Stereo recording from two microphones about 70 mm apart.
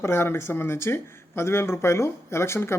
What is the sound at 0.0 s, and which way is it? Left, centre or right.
Speech, left.